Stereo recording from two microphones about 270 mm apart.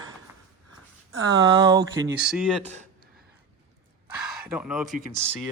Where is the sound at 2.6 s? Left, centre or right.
Right.